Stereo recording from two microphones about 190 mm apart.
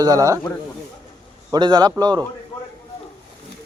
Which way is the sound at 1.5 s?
20° right (ahead or behind).